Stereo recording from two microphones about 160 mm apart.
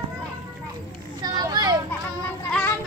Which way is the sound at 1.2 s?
25° right (ahead or behind).